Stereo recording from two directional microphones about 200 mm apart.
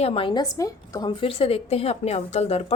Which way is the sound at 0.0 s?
25° left (ahead or behind).